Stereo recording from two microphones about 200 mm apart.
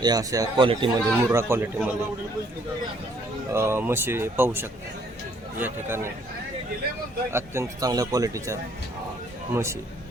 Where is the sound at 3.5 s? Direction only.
15° right (ahead or behind).